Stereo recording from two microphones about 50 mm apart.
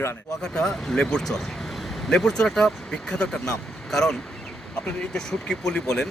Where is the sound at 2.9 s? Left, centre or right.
Centre.